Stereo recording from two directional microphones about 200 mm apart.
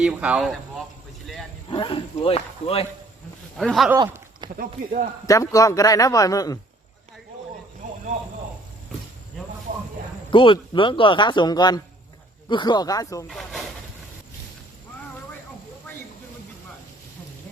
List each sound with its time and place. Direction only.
0.0 s speech: 5° right (ahead or behind)
1.7 s speech: 25° left (ahead or behind)
3.6 s speech: centre (ahead or behind)
3.9 s a sound: 20° right (ahead or behind)
4.5 s speech: 40° right (ahead or behind)
5.2 s a man's voice: 15° left (ahead or behind)
10.3 s speech: 25° left (ahead or behind)
13.2 s speech: centre (ahead or behind)